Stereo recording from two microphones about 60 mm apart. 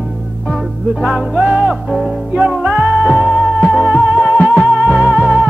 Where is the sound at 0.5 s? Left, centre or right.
Centre.